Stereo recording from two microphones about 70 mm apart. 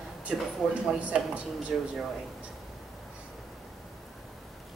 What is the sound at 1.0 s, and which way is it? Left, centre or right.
Speech, centre.